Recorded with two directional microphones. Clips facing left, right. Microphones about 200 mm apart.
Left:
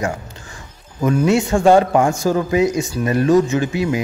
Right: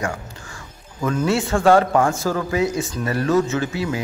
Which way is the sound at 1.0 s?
15° left (ahead or behind).